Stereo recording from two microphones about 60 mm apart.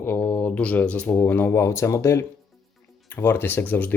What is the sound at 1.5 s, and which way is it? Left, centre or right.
Speech, left.